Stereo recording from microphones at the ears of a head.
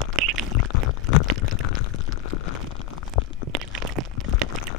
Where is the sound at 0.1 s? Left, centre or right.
Right.